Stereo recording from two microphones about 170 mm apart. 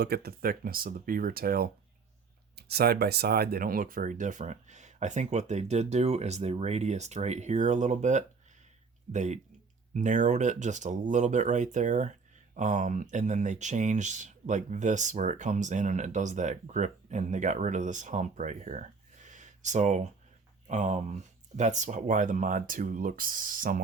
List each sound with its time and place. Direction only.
0.0 s speech: 70° right (ahead or behind)